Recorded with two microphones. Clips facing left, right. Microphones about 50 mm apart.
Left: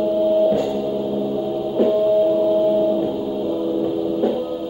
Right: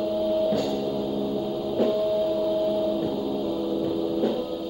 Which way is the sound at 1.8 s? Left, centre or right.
Centre.